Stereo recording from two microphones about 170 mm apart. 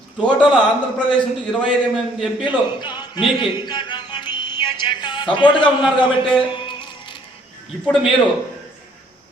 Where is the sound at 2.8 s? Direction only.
25° left (ahead or behind).